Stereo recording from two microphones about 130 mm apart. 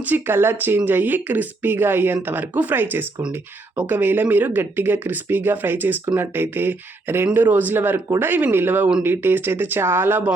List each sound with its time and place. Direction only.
0.0 s a woman's voice: 15° right (ahead or behind)